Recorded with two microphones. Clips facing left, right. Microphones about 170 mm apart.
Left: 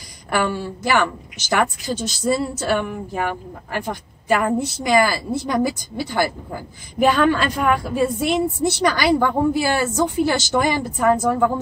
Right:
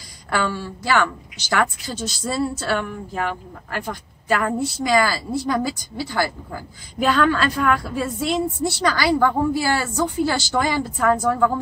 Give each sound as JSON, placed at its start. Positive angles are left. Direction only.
{"t": 0.3, "sound": "a woman's voice", "side_deg": 15}